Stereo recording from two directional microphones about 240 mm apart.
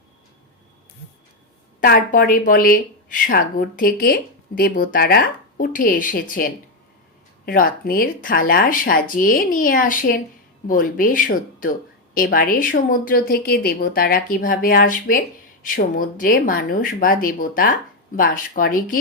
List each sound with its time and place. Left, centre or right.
1.8 s speech: left